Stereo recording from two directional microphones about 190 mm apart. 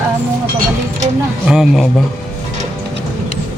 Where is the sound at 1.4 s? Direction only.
5° right (ahead or behind).